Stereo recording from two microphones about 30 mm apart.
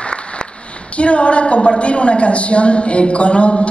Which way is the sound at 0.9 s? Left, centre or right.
Left.